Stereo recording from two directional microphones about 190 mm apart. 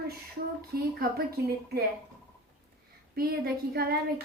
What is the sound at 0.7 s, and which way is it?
Speech, 55° right (ahead or behind).